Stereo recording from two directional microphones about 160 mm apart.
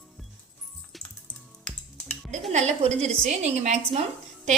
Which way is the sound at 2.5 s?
45° right (ahead or behind).